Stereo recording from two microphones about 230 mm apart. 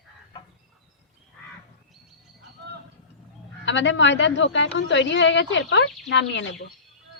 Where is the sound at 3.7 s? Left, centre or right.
Left.